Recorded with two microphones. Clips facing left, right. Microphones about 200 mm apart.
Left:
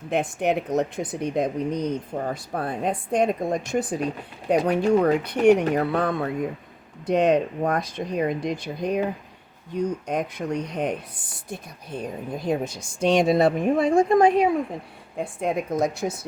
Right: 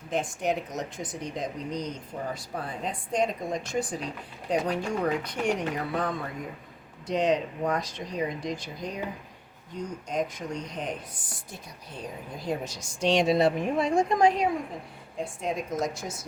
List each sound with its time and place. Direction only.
0.1 s speech: 60° left (ahead or behind)
12.5 s speech: 55° left (ahead or behind)